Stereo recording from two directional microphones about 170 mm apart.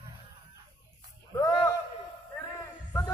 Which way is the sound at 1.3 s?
20° left (ahead or behind).